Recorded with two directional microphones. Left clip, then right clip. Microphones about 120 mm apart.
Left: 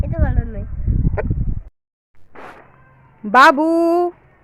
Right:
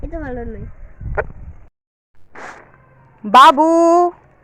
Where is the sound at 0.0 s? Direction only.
20° left (ahead or behind).